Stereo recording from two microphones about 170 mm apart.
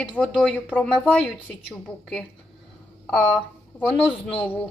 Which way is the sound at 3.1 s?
5° left (ahead or behind).